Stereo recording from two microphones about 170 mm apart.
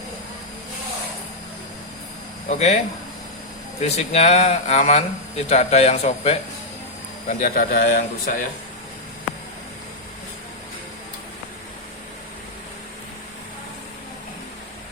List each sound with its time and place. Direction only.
2.5 s speech: 45° left (ahead or behind)
7.3 s a man's voice: 55° left (ahead or behind)